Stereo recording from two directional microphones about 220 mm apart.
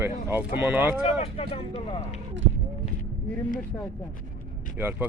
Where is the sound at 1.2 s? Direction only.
25° left (ahead or behind).